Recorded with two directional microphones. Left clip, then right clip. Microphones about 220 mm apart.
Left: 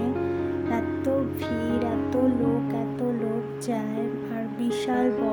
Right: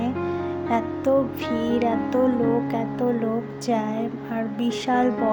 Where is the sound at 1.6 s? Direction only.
15° right (ahead or behind).